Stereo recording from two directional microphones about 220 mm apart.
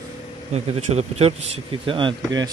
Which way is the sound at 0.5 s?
30° right (ahead or behind).